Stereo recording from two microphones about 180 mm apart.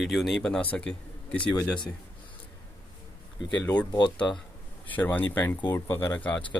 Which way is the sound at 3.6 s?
10° left (ahead or behind).